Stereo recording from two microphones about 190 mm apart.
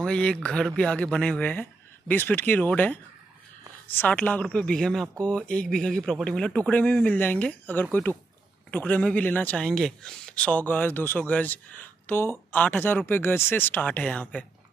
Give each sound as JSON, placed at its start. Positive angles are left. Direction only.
{"t": 0.0, "sound": "a man's voice", "side_deg": 5}